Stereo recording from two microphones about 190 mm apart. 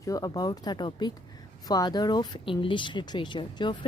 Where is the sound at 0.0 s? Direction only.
20° left (ahead or behind).